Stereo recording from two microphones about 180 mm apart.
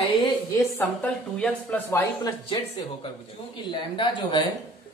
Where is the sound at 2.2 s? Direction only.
20° left (ahead or behind).